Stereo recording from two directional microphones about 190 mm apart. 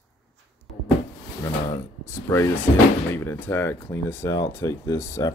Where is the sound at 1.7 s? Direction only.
15° left (ahead or behind).